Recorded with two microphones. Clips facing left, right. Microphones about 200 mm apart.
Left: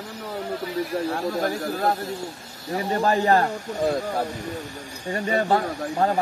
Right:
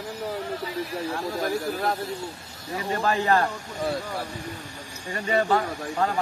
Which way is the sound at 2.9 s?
35° left (ahead or behind).